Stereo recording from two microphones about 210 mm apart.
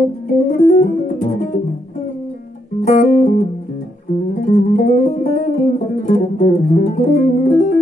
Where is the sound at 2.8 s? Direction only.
40° left (ahead or behind).